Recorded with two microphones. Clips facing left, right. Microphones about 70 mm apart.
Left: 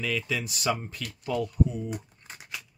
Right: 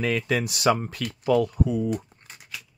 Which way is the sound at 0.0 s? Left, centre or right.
Right.